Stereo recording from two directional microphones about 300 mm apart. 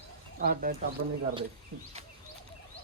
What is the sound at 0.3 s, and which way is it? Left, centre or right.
Speech, right.